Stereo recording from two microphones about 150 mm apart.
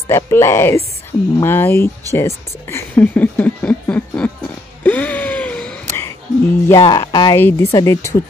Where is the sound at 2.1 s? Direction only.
15° left (ahead or behind).